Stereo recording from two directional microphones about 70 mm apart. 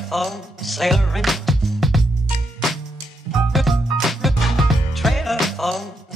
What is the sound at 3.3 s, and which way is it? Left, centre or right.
Music, centre.